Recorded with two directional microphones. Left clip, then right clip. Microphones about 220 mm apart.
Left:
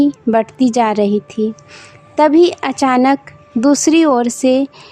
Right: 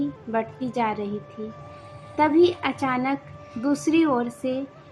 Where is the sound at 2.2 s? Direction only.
55° left (ahead or behind).